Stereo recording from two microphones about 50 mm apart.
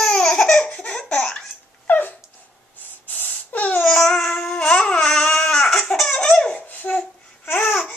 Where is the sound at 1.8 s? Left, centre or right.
Left.